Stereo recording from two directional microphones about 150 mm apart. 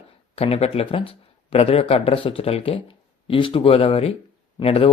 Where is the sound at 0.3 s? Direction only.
45° left (ahead or behind).